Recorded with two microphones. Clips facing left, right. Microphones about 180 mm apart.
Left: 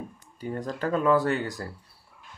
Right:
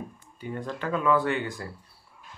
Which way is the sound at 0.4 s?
40° left (ahead or behind).